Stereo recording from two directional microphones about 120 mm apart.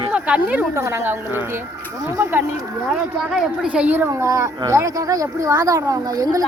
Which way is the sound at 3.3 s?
5° right (ahead or behind).